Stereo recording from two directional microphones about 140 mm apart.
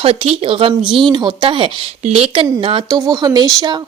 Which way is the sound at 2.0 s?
50° right (ahead or behind).